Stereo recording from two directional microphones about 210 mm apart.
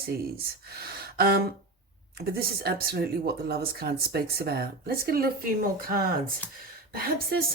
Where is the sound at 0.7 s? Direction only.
45° right (ahead or behind).